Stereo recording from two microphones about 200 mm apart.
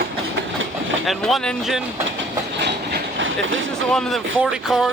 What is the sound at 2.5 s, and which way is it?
Train, 60° right (ahead or behind).